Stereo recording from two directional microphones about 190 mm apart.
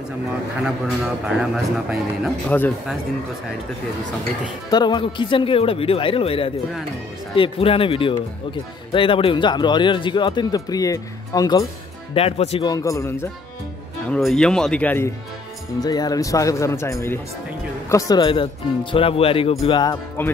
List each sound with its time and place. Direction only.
0.7 s a man's voice: 5° right (ahead or behind)
4.6 s speech: 20° left (ahead or behind)
12.1 s speech: 30° left (ahead or behind)
12.6 s speech: 20° left (ahead or behind)
14.0 s a man's voice: 5° left (ahead or behind); by 20.2 s 20° left (ahead or behind)